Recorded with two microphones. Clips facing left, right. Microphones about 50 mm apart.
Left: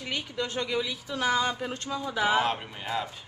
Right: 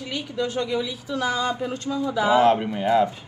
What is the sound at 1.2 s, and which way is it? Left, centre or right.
Speech, left.